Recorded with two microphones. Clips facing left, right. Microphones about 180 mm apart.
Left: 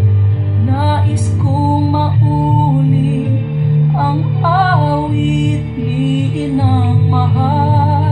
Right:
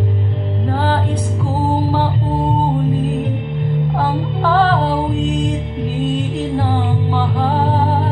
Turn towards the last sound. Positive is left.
turn(degrees=-20)  # may be behind; listen again after turning